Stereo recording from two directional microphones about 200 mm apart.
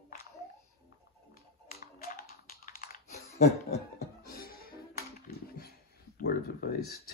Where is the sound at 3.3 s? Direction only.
30° left (ahead or behind).